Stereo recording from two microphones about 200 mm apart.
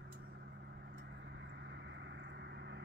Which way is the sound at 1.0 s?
60° right (ahead or behind).